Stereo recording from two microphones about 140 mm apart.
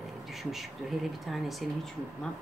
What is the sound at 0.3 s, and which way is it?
Speech, centre (ahead or behind).